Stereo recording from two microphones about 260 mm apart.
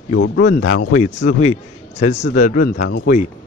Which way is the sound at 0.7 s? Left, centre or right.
Left.